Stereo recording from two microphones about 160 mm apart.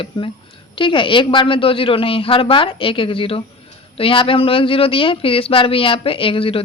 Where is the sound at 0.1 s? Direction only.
35° left (ahead or behind).